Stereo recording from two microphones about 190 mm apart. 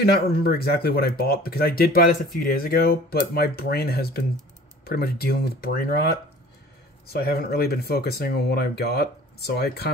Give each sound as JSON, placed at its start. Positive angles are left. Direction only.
{"t": 0.0, "sound": "speech", "side_deg": 55}
{"t": 7.1, "sound": "speech", "side_deg": 55}